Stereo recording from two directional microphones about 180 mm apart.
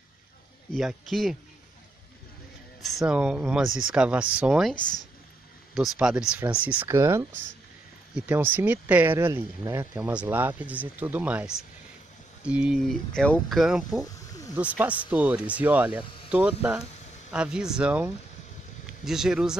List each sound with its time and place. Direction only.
0.7 s speech: centre (ahead or behind)
2.8 s speech: 5° right (ahead or behind)
8.3 s speech: 10° right (ahead or behind)
14.0 s snake: 20° left (ahead or behind)
14.5 s speech: 10° right (ahead or behind)